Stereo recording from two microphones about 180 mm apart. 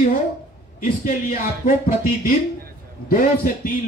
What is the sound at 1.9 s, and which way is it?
A man's voice, 50° left (ahead or behind).